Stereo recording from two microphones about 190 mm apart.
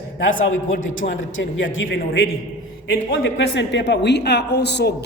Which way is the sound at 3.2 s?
70° left (ahead or behind).